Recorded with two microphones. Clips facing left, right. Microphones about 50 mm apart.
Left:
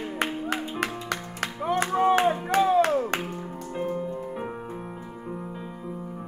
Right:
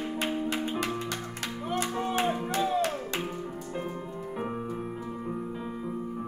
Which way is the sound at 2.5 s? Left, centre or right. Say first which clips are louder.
Left 7 dB; left.